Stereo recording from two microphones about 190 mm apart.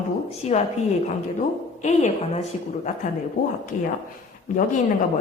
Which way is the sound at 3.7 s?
45° left (ahead or behind).